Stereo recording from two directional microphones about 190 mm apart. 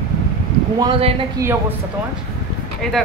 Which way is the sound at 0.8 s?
30° right (ahead or behind).